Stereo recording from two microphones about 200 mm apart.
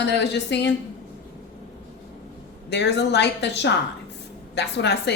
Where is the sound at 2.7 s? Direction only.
60° left (ahead or behind).